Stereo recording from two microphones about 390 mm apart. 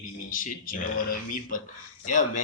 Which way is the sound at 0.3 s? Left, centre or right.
Left.